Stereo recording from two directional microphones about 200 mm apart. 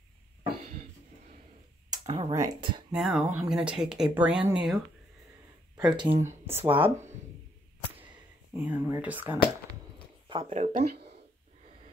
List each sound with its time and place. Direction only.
1.9 s a sound: 30° right (ahead or behind)
2.3 s speech: 15° right (ahead or behind)
3.0 s speech: centre (ahead or behind)
5.8 s speech: 20° right (ahead or behind)
8.5 s speech: 10° right (ahead or behind)
10.2 s speech: 30° right (ahead or behind)